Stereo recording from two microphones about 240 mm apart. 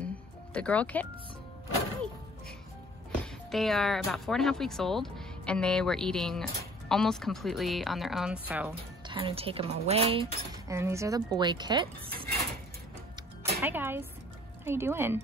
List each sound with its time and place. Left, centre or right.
0.0 s music: centre
3.5 s speech: centre
9.0 s a woman's voice: right
10.7 s speech: centre
13.4 s music: centre
14.6 s speech: centre